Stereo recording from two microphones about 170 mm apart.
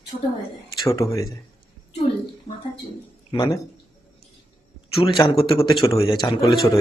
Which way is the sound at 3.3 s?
25° left (ahead or behind).